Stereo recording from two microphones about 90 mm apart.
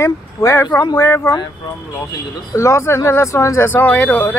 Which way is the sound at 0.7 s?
50° left (ahead or behind).